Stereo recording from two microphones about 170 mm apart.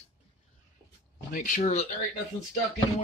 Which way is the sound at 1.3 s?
55° left (ahead or behind).